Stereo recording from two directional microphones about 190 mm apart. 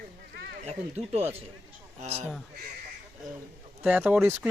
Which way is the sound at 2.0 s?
35° right (ahead or behind).